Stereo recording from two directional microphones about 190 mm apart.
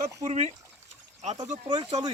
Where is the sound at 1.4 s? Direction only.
20° right (ahead or behind).